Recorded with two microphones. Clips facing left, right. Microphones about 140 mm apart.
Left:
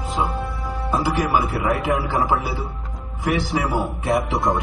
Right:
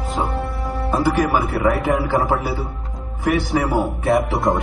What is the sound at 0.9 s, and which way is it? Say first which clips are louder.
Speech: right 2 dB; 55° right (ahead or behind).